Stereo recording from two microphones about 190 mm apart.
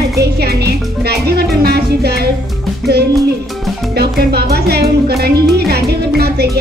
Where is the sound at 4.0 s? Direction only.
60° right (ahead or behind).